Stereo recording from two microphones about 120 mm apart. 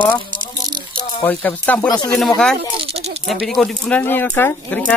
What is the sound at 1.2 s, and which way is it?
Speech, 15° left (ahead or behind).